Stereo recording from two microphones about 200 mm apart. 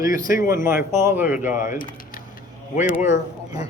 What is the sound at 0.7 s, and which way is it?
Speech, 15° right (ahead or behind).